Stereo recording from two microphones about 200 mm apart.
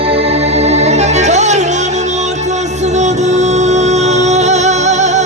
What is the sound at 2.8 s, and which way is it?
Music, 35° right (ahead or behind).